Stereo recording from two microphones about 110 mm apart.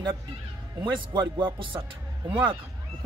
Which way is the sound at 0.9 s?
45° right (ahead or behind).